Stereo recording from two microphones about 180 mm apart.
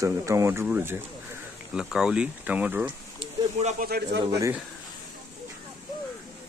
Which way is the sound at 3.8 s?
60° right (ahead or behind).